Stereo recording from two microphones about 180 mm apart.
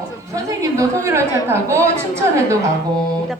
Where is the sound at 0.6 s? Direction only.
15° right (ahead or behind).